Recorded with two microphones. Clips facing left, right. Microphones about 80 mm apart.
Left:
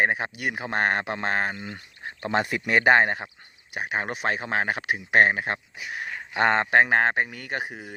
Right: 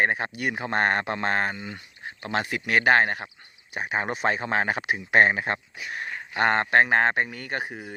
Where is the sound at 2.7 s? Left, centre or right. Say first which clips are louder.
Left 1 dB; left.